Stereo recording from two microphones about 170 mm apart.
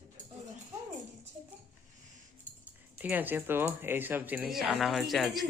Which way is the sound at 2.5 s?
45° right (ahead or behind).